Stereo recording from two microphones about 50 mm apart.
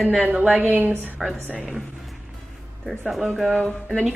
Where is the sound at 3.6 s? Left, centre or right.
Left.